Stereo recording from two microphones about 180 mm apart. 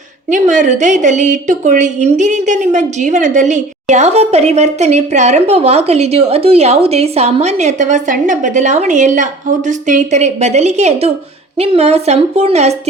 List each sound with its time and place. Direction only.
0.3 s a woman's voice: 45° right (ahead or behind)